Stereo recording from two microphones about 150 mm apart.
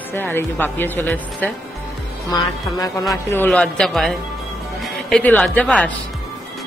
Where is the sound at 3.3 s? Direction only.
10° left (ahead or behind).